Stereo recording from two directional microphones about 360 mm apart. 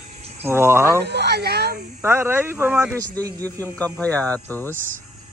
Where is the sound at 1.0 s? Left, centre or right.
Right.